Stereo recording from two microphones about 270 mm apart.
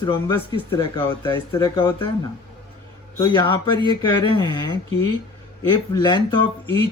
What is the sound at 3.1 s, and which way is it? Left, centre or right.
Speech, centre.